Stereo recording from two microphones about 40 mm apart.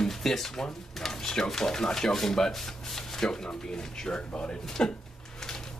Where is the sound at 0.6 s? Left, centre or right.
Centre.